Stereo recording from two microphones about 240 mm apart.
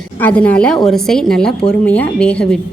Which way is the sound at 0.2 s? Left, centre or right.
Centre.